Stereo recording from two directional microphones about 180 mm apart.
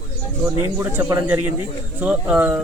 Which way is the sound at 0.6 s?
15° right (ahead or behind).